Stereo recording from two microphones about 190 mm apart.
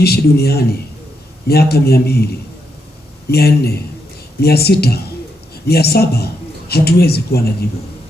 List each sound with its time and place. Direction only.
0.0 s speech: 55° left (ahead or behind)
3.3 s a man's voice: 55° left (ahead or behind)